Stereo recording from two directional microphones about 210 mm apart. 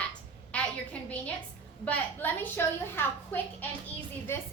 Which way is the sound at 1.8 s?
10° left (ahead or behind).